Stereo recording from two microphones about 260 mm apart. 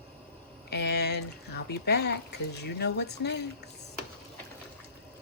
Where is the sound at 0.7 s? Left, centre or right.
Left.